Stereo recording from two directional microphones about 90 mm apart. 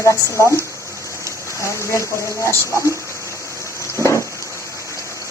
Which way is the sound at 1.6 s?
30° left (ahead or behind).